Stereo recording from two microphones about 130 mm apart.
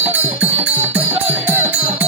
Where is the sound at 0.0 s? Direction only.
15° right (ahead or behind).